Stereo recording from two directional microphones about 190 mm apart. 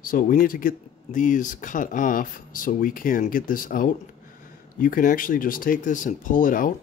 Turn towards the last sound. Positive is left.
turn(degrees=45)  # may be behind; listen again after turning